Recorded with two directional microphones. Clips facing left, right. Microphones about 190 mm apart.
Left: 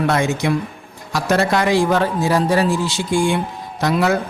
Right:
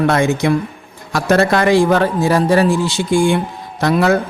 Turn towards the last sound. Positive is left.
turn(degrees=-55)  # may be behind; listen again after turning